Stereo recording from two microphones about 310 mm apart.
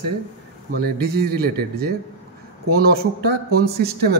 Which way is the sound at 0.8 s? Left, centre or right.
Right.